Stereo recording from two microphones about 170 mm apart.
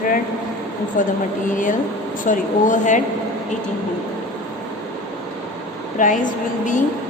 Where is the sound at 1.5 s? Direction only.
50° left (ahead or behind).